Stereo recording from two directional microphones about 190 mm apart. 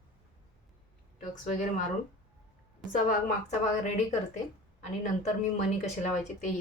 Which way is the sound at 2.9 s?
45° left (ahead or behind).